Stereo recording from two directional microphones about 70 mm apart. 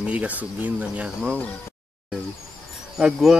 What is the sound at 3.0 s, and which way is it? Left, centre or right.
Speech, centre.